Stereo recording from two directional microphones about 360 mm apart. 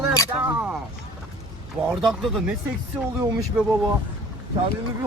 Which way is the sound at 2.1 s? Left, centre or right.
Centre.